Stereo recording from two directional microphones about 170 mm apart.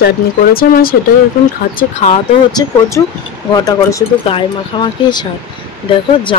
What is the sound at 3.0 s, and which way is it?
Speech, 20° left (ahead or behind).